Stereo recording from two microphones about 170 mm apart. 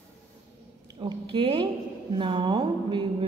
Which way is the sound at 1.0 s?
30° right (ahead or behind).